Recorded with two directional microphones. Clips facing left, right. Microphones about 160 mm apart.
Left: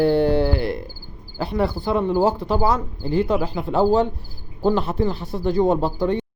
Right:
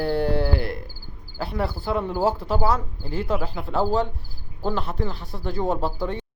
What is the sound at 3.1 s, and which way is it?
Speech, 5° right (ahead or behind).